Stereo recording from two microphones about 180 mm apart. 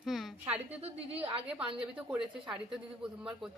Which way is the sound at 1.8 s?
5° right (ahead or behind).